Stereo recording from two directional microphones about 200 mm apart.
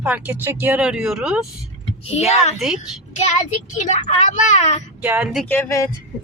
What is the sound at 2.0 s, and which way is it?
Speech, 30° left (ahead or behind).